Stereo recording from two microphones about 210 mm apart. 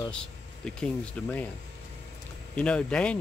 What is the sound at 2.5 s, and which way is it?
Speech, 5° left (ahead or behind).